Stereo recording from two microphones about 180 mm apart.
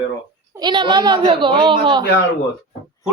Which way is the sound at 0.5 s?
25° right (ahead or behind).